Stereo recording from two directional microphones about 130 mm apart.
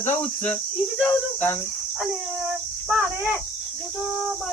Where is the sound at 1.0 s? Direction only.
15° left (ahead or behind).